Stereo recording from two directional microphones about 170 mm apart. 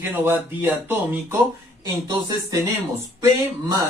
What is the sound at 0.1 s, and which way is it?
Speech, 10° right (ahead or behind).